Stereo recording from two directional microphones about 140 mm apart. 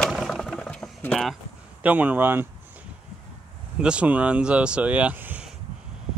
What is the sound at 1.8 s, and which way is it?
Speech, 10° right (ahead or behind).